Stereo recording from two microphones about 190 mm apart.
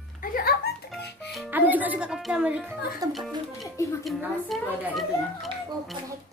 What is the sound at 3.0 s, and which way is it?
Speech, 20° right (ahead or behind).